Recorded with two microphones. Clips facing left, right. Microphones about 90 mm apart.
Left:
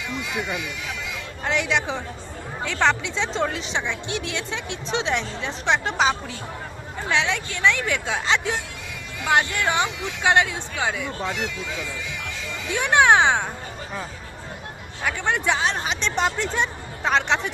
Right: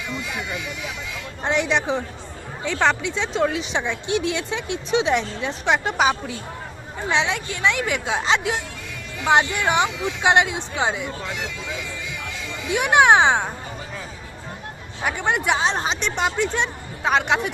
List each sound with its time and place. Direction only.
1.5 s speech: 20° right (ahead or behind)
12.7 s speech: 15° right (ahead or behind)
15.0 s speech: 15° right (ahead or behind)
16.1 s speech: centre (ahead or behind)